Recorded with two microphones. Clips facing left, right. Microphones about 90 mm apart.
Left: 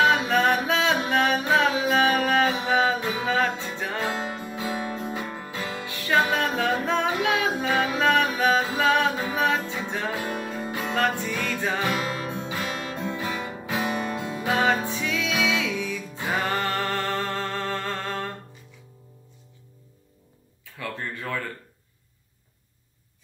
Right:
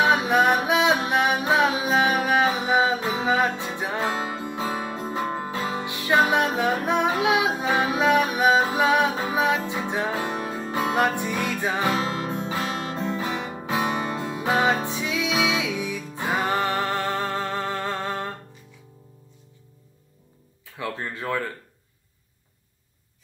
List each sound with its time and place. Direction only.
0.0 s music: 20° right (ahead or behind)
4.4 s music: 35° right (ahead or behind)
5.4 s music: 25° right (ahead or behind)
20.7 s speech: 20° right (ahead or behind)